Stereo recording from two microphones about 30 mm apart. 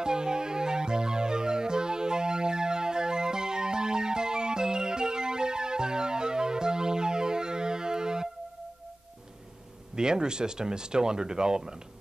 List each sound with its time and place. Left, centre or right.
0.0 s music: right
9.9 s speech: right